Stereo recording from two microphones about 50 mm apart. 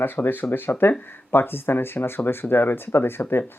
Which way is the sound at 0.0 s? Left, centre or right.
Left.